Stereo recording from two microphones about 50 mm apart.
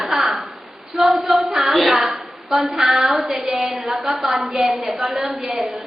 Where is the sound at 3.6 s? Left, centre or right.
Centre.